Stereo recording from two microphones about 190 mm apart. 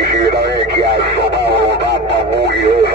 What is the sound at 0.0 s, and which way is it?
Radio, 60° right (ahead or behind).